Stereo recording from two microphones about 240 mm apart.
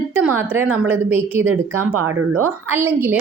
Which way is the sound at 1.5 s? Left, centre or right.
Right.